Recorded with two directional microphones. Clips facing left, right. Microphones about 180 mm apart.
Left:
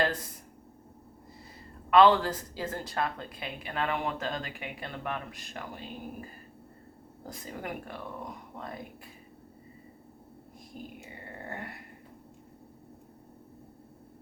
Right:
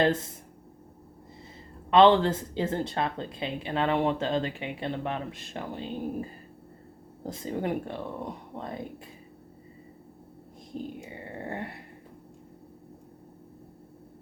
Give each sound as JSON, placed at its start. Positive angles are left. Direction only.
{"t": 0.0, "sound": "speech", "side_deg": -25}
{"t": 1.9, "sound": "speech", "side_deg": -25}
{"t": 7.3, "sound": "speech", "side_deg": -25}
{"t": 10.7, "sound": "speech", "side_deg": -30}
{"t": 11.4, "sound": "a sound", "side_deg": -25}